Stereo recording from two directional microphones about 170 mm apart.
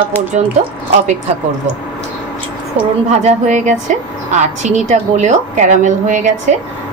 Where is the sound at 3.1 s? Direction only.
40° right (ahead or behind).